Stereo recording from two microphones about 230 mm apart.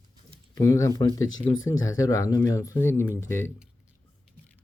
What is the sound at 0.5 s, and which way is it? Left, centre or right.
Speech, centre.